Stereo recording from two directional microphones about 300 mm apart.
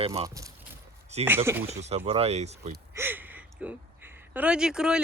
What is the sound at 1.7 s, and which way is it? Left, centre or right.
Speech, right.